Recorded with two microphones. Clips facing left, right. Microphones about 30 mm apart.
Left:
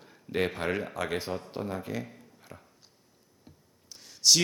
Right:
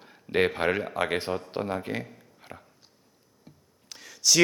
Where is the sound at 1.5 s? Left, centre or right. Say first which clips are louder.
Right 4 dB; right.